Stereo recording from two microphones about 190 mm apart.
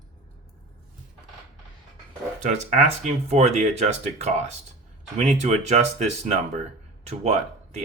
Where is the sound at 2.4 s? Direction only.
40° right (ahead or behind).